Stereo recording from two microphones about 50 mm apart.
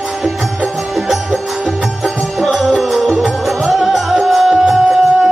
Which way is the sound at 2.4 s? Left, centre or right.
Centre.